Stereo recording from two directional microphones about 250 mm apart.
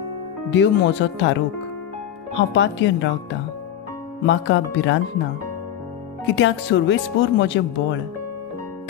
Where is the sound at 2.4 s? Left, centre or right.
Left.